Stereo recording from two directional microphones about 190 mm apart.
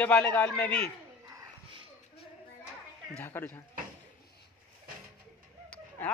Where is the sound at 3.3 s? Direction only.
15° left (ahead or behind).